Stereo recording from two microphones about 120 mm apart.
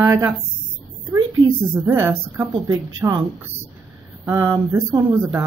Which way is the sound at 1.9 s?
20° right (ahead or behind).